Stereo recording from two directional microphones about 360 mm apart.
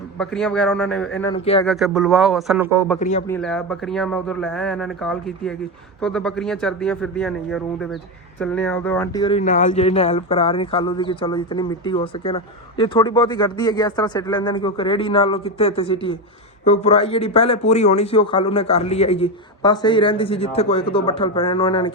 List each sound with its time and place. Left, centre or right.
0.2 s speech: centre
1.6 s speech: centre
3.0 s a man's voice: centre
3.2 s speech: centre